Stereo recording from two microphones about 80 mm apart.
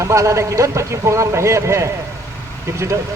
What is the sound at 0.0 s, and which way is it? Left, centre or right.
Speech, right.